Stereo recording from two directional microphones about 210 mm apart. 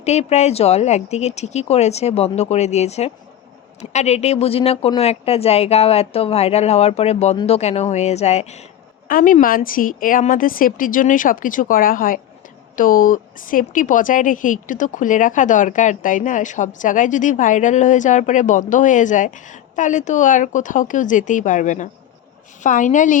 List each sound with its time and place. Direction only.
0.0 s a woman's voice: 30° left (ahead or behind)